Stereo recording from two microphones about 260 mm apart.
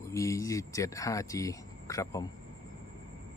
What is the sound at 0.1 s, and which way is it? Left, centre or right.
Speech, centre.